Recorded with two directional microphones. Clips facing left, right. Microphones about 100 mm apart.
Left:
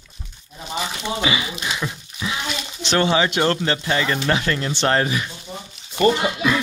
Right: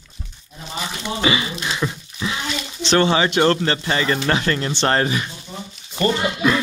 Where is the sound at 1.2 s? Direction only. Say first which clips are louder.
Right 5 dB; 5° left (ahead or behind).